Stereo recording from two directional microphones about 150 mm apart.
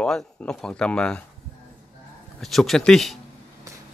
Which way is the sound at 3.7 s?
20° right (ahead or behind).